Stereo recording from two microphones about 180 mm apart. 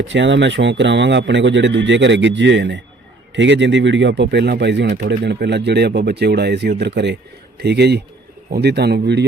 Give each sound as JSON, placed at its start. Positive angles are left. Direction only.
{"t": 0.1, "sound": "a man's voice", "side_deg": -90}